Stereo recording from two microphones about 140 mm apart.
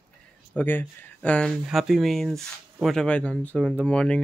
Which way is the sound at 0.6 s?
10° left (ahead or behind).